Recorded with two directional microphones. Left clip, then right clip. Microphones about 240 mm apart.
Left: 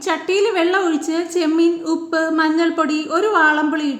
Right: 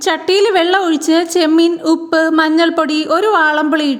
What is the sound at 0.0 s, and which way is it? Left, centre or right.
A woman's voice, right.